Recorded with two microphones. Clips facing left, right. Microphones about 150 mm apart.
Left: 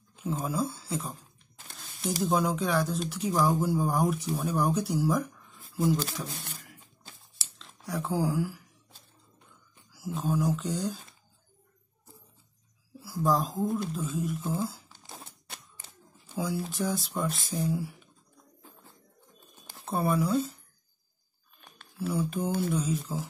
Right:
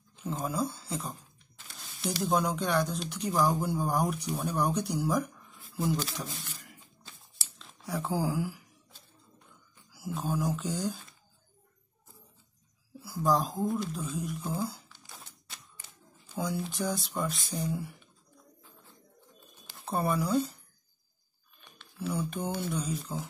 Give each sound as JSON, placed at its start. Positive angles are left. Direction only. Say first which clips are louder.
{"t": 0.2, "sound": "speech", "louder": "left 2 dB", "side_deg": 0}
{"t": 2.2, "sound": "speech", "louder": "left 1 dB", "side_deg": 0}
{"t": 5.7, "sound": "a sound", "louder": "left 4 dB", "side_deg": 0}
{"t": 7.3, "sound": "a sound", "louder": "even", "side_deg": 0}
{"t": 10.1, "sound": "speech", "louder": "left 3 dB", "side_deg": 0}
{"t": 13.0, "sound": "speech", "louder": "left 1 dB", "side_deg": 0}
{"t": 14.9, "sound": "a sound", "louder": "left 5 dB", "side_deg": 35}
{"t": 16.3, "sound": "speech", "louder": "left 2 dB", "side_deg": 0}
{"t": 19.8, "sound": "speech", "louder": "left 2 dB", "side_deg": 0}
{"t": 22.0, "sound": "speech", "louder": "left 3 dB", "side_deg": 0}